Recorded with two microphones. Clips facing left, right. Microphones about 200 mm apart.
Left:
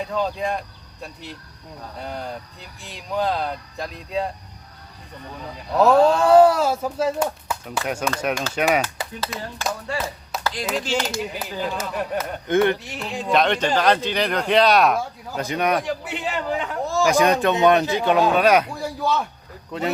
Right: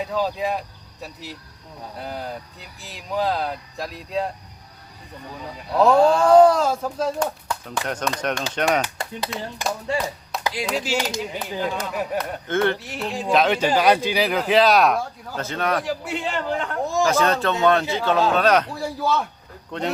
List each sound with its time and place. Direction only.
0.0 s speech: 5° right (ahead or behind)
5.3 s speech: 5° right (ahead or behind)
6.2 s speech: 5° left (ahead or behind)
10.4 s clapping: 10° right (ahead or behind)
10.7 s speech: 5° right (ahead or behind)
11.2 s speech: centre (ahead or behind)
12.5 s speech: 15° left (ahead or behind)
13.0 s speech: centre (ahead or behind)
15.4 s speech: 15° left (ahead or behind)
15.8 s speech: centre (ahead or behind)
17.0 s speech: 15° left (ahead or behind)
18.7 s speech: centre (ahead or behind)